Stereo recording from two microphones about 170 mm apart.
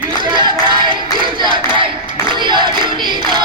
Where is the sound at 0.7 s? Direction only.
30° right (ahead or behind).